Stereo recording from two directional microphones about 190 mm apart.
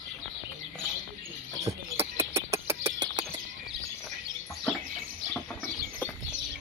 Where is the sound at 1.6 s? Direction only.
15° right (ahead or behind).